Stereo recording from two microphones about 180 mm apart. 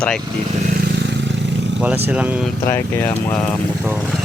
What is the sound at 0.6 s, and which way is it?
Vehicle, 60° right (ahead or behind).